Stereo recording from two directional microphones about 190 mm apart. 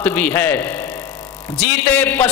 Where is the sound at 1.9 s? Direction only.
10° left (ahead or behind).